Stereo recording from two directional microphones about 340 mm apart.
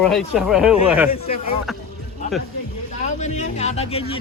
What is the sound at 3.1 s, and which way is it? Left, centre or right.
Speech, left.